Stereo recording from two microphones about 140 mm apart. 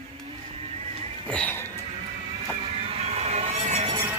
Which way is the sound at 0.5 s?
50° right (ahead or behind).